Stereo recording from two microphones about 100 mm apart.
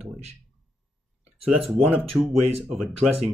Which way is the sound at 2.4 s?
90° right.